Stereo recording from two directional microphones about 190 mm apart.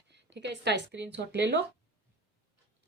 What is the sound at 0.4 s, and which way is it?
A woman's voice, 65° right (ahead or behind).